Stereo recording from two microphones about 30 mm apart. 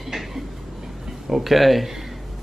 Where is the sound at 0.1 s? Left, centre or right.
Centre.